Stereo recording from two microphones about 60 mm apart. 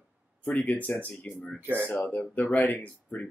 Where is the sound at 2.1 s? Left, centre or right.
Left.